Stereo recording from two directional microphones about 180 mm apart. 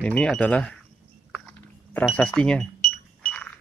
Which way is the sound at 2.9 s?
5° left (ahead or behind).